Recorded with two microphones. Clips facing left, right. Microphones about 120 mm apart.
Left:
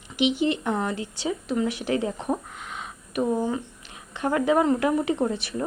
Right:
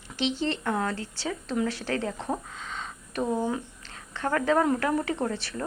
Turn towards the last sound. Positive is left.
turn(degrees=15)  # may be behind; listen again after turning